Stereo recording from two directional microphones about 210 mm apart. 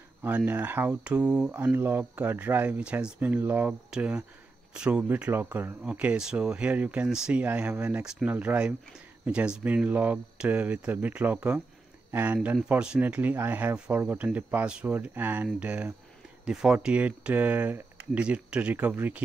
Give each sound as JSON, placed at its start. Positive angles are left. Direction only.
{"t": 0.2, "sound": "speech", "side_deg": -10}